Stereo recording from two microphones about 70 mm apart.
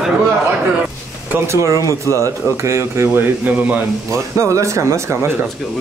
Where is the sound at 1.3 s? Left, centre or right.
Right.